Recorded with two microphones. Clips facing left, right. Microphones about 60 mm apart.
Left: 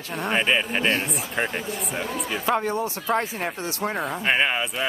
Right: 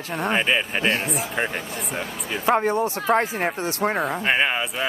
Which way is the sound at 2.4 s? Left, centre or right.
Right.